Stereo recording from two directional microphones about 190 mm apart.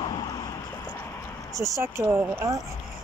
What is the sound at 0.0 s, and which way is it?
Vehicle, 20° left (ahead or behind).